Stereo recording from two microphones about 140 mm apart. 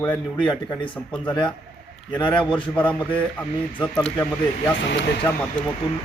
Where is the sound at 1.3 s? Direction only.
35° left (ahead or behind).